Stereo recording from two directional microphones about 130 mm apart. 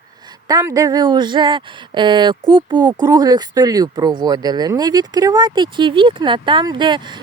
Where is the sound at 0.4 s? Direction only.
30° right (ahead or behind).